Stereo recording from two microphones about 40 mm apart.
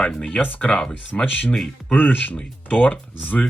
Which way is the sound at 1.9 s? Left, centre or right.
Left.